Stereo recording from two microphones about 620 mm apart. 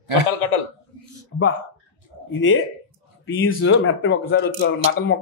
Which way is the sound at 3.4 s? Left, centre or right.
Centre.